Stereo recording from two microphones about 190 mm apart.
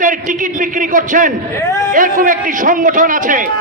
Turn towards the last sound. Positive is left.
turn(degrees=-45)  # may be behind; listen again after turning